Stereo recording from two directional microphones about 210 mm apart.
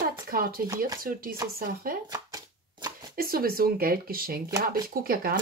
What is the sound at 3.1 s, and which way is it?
Speech, 45° right (ahead or behind).